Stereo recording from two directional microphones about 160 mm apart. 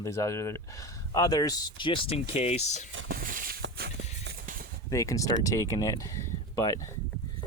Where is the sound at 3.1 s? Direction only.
60° right (ahead or behind).